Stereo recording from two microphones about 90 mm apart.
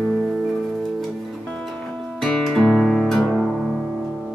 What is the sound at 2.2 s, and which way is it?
Music, 5° left (ahead or behind).